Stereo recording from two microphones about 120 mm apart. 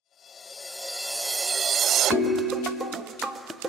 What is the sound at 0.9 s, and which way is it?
Music, centre (ahead or behind).